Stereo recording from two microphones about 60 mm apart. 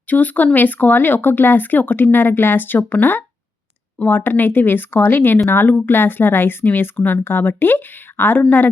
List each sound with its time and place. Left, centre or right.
0.1 s speech: left